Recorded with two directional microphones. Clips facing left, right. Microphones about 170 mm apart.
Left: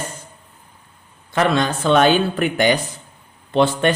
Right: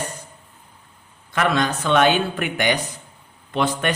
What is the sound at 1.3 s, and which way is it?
Speech, 25° left (ahead or behind).